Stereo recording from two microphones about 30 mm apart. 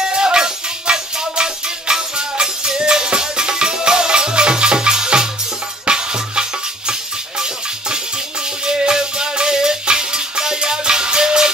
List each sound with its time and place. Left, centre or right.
0.0 s music: right
8.6 s music: right